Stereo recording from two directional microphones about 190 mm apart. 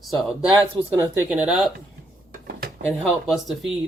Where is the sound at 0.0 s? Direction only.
Centre (ahead or behind).